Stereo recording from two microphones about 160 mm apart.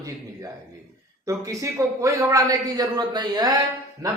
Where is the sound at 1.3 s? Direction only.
20° right (ahead or behind).